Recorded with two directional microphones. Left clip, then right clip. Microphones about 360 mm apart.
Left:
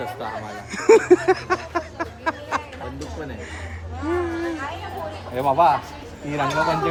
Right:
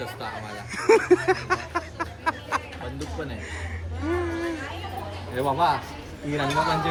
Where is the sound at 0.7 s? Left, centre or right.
Centre.